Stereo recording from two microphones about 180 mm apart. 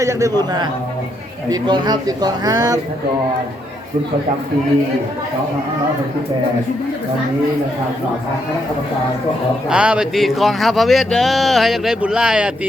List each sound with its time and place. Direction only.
0.0 s speech: 15° right (ahead or behind)
9.6 s speech: 5° right (ahead or behind)